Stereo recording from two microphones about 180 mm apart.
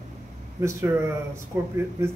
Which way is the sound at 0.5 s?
15° right (ahead or behind).